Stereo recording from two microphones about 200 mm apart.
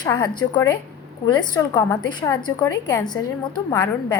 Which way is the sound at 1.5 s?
20° left (ahead or behind).